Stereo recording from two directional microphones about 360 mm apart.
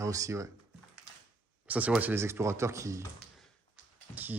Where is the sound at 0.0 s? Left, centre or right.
Centre.